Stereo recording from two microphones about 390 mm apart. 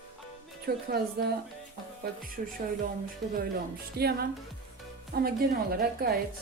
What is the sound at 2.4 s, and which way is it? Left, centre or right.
Speech, centre.